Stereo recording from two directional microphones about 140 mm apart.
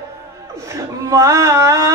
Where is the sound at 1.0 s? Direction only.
25° right (ahead or behind).